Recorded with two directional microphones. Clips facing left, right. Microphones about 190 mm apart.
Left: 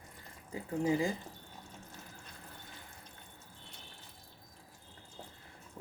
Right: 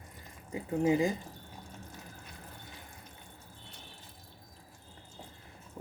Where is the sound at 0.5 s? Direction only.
15° right (ahead or behind).